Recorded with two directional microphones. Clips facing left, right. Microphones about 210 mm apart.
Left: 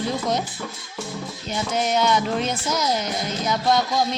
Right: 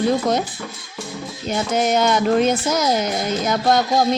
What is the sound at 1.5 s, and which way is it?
Speech, 50° right (ahead or behind).